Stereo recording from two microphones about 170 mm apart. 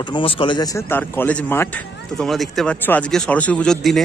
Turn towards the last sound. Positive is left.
turn(degrees=0)  # may be behind; listen again after turning